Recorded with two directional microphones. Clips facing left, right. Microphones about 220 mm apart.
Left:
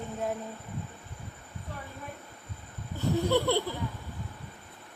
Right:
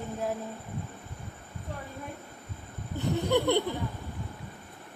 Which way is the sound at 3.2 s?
15° right (ahead or behind).